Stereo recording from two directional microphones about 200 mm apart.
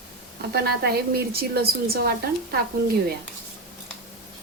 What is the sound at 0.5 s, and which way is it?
A woman's voice, 50° right (ahead or behind).